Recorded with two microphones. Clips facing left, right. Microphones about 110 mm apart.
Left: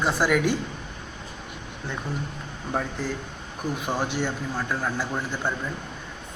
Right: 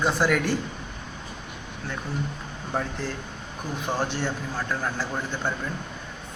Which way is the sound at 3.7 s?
5° left (ahead or behind).